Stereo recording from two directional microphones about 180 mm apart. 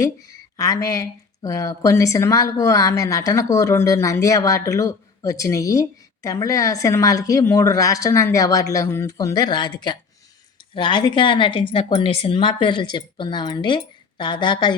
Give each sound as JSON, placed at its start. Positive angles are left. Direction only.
{"t": 0.0, "sound": "speech", "side_deg": 20}